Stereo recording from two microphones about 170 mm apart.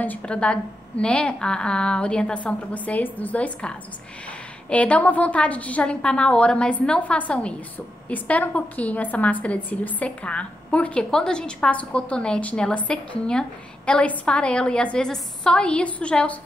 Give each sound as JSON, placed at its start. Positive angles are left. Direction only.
{"t": 0.0, "sound": "a woman's voice", "side_deg": 10}